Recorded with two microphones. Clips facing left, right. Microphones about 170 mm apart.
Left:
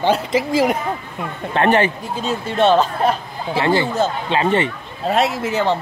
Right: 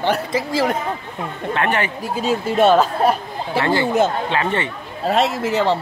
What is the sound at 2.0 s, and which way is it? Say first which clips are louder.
Speech: right 3 dB; 5° right (ahead or behind).